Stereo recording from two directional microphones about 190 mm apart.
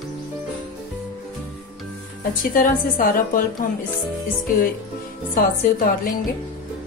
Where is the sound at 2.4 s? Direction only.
45° left (ahead or behind).